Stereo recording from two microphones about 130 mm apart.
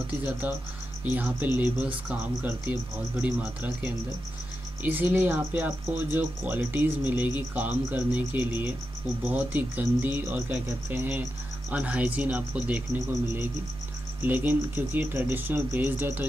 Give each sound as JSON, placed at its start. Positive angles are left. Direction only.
{"t": 0.0, "sound": "speech", "side_deg": -15}
{"t": 14.2, "sound": "speech", "side_deg": -15}